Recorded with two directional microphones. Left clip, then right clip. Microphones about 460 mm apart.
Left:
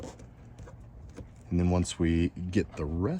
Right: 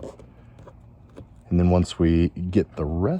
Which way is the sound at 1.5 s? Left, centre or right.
Centre.